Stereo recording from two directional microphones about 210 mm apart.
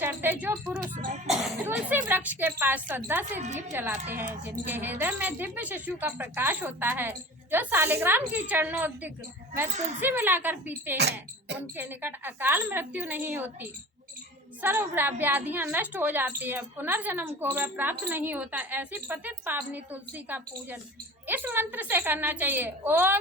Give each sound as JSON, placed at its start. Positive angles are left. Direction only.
{"t": 0.0, "sound": "speech", "side_deg": -10}
{"t": 1.3, "sound": "a sound", "side_deg": 0}
{"t": 1.6, "sound": "a woman's voice", "side_deg": -10}
{"t": 10.9, "sound": "speech", "side_deg": -50}
{"t": 11.8, "sound": "a woman's voice", "side_deg": -10}